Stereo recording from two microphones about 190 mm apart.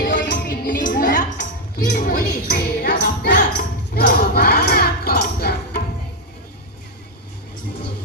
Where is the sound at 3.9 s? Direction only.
55° left (ahead or behind).